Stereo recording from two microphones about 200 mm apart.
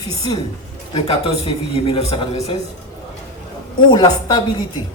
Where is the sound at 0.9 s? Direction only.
30° left (ahead or behind).